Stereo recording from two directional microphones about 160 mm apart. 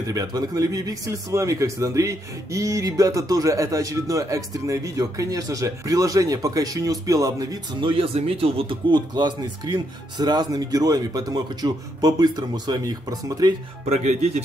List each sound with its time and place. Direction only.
0.0 s speech: 20° right (ahead or behind)
7.9 s speech: 35° right (ahead or behind)
13.8 s a man's voice: 45° right (ahead or behind)